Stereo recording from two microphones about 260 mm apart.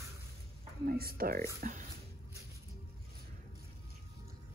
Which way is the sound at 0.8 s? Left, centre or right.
Right.